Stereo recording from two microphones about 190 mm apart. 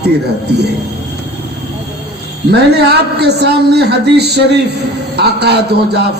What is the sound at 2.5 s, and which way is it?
A man's voice, 60° right (ahead or behind).